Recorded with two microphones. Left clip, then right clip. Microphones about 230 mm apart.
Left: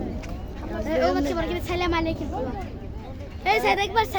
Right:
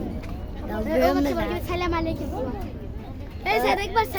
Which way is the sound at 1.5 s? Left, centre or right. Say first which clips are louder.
Left 1 dB; centre.